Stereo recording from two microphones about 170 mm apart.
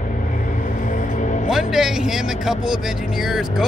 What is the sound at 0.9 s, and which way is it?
Music, 45° left (ahead or behind).